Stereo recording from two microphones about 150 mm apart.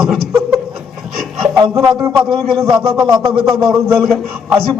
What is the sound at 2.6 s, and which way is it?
A man's voice, centre (ahead or behind).